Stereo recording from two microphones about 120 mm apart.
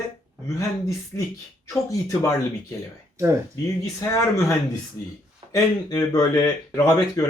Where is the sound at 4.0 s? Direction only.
25° left (ahead or behind).